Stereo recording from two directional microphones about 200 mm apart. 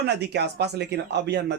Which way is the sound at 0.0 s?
55° right (ahead or behind).